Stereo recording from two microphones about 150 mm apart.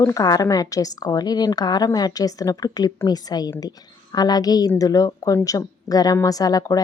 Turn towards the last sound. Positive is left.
turn(degrees=25)  # may be behind; listen again after turning